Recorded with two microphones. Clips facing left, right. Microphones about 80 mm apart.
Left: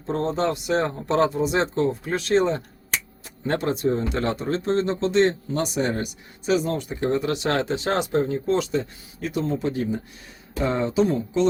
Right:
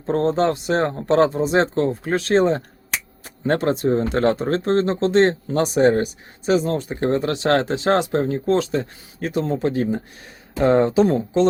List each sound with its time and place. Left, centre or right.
0.0 s speech: right
6.9 s speech: right